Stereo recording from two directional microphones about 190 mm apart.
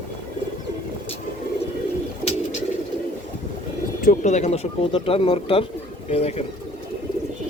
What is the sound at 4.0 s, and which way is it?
Speech, 40° left (ahead or behind).